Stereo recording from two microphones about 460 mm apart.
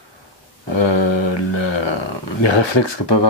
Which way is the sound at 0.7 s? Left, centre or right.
Left.